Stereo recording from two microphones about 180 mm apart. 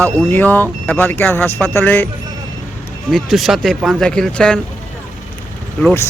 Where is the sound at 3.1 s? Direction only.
Centre (ahead or behind).